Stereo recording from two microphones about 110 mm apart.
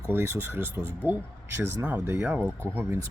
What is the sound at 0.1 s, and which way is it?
Speech, 20° right (ahead or behind).